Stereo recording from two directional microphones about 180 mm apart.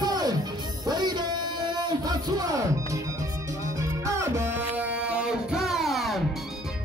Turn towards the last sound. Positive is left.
turn(degrees=0)  # may be behind; listen again after turning